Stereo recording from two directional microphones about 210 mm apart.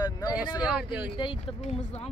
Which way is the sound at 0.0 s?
20° left (ahead or behind).